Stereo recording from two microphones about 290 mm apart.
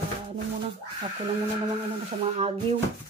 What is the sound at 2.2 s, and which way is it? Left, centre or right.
Speech, centre.